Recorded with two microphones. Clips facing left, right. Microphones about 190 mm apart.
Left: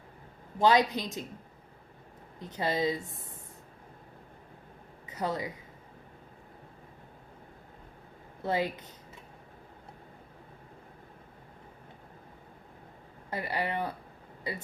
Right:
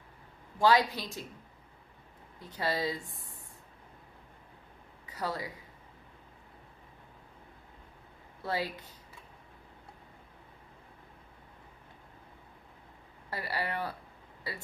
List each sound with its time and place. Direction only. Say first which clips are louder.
0.6 s speech: left 2 dB; 20° left (ahead or behind)
2.4 s speech: left 3 dB; 20° left (ahead or behind)
5.0 s speech: left 3 dB; 20° left (ahead or behind)
8.4 s speech: left 4 dB; 20° left (ahead or behind)
13.3 s speech: left 3 dB; 20° left (ahead or behind)